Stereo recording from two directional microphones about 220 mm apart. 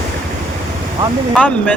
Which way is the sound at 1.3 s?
5° left (ahead or behind).